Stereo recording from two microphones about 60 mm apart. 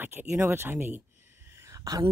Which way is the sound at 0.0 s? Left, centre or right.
Right.